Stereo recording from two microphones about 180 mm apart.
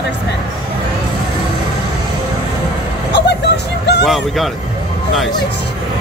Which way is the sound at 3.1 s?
70° left (ahead or behind).